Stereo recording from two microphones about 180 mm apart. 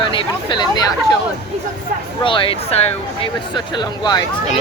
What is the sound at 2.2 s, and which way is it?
Speech, 30° left (ahead or behind).